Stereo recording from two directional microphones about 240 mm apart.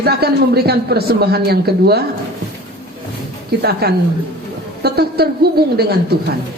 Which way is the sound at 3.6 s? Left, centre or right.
Right.